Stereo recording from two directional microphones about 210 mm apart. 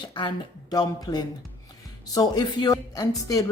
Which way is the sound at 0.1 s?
20° left (ahead or behind).